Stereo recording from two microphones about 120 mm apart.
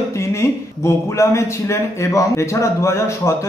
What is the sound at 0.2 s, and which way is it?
Speech, 25° left (ahead or behind).